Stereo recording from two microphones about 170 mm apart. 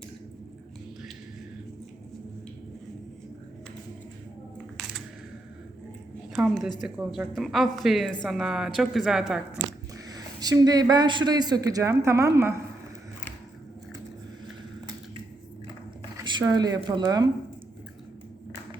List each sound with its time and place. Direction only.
4.5 s a sound: centre (ahead or behind)
6.3 s a woman's voice: centre (ahead or behind)
10.1 s a man's voice: 20° right (ahead or behind)
16.2 s speech: 25° right (ahead or behind)